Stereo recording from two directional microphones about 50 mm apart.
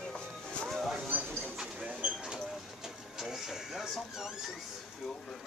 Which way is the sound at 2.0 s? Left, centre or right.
Right.